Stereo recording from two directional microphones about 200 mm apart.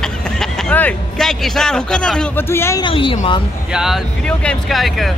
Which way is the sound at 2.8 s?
25° left (ahead or behind).